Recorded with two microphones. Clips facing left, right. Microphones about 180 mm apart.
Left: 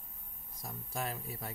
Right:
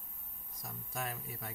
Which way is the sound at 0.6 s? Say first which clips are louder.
Left 2 dB; 30° left (ahead or behind).